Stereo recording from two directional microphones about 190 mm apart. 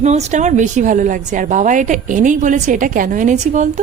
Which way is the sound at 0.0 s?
35° right (ahead or behind).